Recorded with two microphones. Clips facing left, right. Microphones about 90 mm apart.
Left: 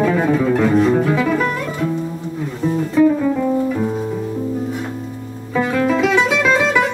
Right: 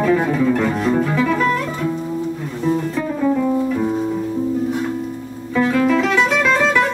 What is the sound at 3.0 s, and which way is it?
Music, 5° left (ahead or behind).